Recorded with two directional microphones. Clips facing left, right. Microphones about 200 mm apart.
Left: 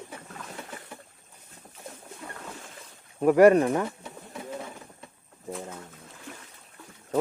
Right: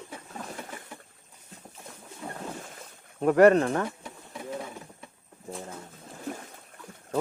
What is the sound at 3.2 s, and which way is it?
Speech, 10° left (ahead or behind).